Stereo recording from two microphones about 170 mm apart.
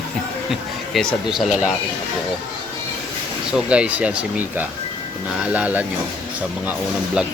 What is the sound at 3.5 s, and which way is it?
Speech, 5° right (ahead or behind).